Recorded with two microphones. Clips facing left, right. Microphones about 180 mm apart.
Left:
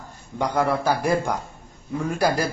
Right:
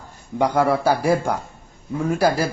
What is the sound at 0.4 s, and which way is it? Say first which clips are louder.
A man's voice: right 4 dB; 10° right (ahead or behind).